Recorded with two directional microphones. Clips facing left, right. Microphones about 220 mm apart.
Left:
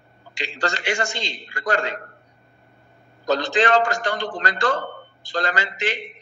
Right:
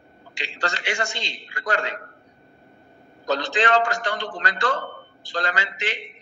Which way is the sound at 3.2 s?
45° left (ahead or behind).